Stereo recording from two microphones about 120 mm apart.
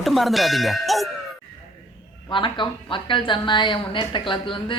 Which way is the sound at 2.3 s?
45° left (ahead or behind).